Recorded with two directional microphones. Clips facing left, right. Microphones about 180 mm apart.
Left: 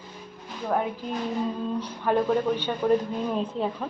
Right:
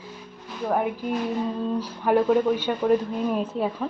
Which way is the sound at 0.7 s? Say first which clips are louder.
Right 2 dB; 10° right (ahead or behind).